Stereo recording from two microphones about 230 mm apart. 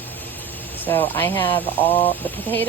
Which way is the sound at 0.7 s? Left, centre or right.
Centre.